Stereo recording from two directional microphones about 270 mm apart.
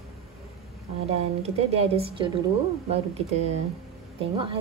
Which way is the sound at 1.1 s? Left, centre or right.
Right.